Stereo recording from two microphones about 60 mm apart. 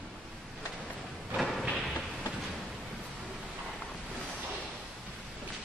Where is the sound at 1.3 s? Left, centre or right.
Centre.